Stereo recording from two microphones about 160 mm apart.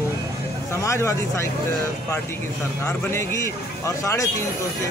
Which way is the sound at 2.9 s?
15° left (ahead or behind).